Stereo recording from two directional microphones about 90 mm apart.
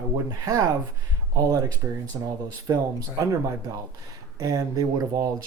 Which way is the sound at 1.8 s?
30° right (ahead or behind).